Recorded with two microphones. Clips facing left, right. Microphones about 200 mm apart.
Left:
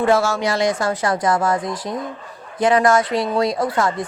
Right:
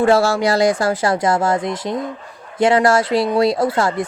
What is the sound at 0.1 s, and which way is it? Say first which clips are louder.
A woman's voice: right 3 dB; 35° right (ahead or behind).